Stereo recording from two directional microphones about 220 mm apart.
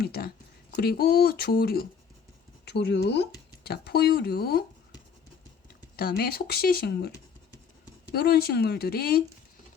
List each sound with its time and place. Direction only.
0.0 s speech: 45° left (ahead or behind)
6.0 s speech: 45° left (ahead or behind)
8.1 s speech: 45° left (ahead or behind)